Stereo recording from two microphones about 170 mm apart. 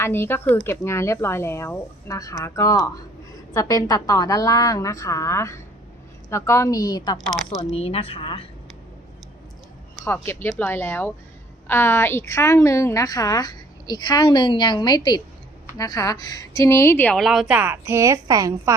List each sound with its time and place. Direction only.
0.0 s a woman's voice: 15° left (ahead or behind)
7.6 s speech: 35° left (ahead or behind)
10.0 s a woman's voice: 15° left (ahead or behind); by 18.7 s 20° right (ahead or behind)